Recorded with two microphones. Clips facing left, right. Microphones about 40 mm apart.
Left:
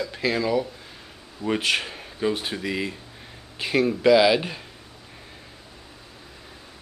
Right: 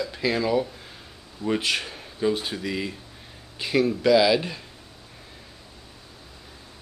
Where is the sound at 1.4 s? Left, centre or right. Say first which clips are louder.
Left 1 dB; centre.